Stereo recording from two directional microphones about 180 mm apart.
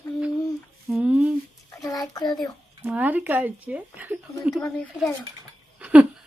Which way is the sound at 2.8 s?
10° right (ahead or behind).